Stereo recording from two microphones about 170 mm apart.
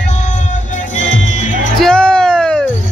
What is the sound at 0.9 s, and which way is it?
Music, 90° left.